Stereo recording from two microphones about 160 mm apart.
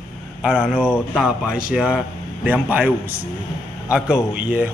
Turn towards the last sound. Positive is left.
turn(degrees=-10)  # may be behind; listen again after turning